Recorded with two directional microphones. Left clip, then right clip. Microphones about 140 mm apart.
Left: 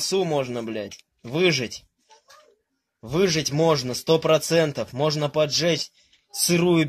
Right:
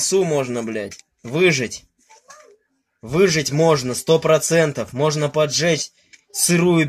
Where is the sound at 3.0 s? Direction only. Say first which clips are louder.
Right 5 dB; 15° left (ahead or behind).